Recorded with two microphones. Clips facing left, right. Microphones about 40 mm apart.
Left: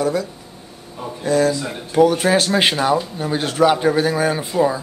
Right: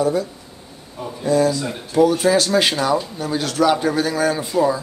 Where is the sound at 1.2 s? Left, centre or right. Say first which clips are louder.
Even; left.